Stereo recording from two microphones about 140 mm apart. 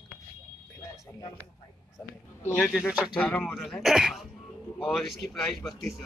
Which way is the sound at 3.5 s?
Centre (ahead or behind).